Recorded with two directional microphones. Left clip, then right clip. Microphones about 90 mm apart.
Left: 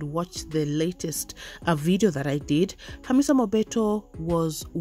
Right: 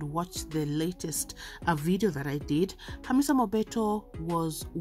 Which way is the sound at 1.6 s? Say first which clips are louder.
Left 5 dB; 45° left (ahead or behind).